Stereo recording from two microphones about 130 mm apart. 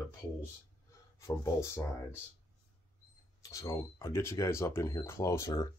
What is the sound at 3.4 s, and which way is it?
Speech, 25° left (ahead or behind).